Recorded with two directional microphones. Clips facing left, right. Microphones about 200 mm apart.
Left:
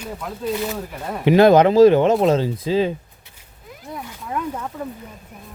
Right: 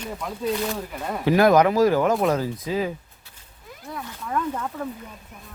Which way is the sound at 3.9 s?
15° left (ahead or behind).